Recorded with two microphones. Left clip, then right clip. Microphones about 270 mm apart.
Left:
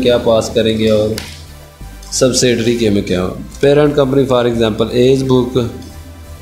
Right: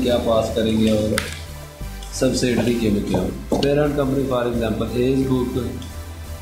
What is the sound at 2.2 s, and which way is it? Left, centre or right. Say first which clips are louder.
Speech: left 8 dB; left.